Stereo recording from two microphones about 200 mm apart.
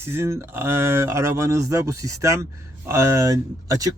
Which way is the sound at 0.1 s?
10° right (ahead or behind).